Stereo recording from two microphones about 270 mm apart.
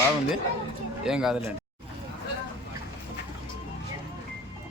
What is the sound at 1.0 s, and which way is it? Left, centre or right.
Speech, centre.